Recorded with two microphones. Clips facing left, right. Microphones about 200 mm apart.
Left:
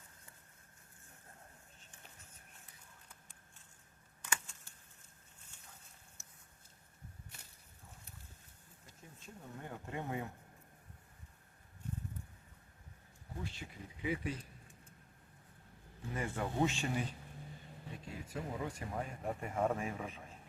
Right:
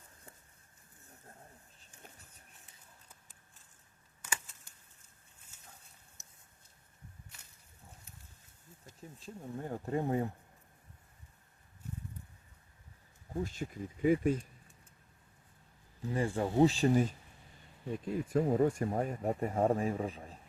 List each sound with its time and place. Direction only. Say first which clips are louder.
4.2 s a sound: even; 10° right (ahead or behind)
9.2 s speech: right 8 dB; 35° right (ahead or behind)
13.4 s speech: right 9 dB; 45° right (ahead or behind)
16.1 s speech: right 7 dB; 30° right (ahead or behind)